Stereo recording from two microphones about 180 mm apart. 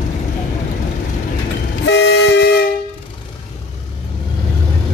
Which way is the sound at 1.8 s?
75° left (ahead or behind).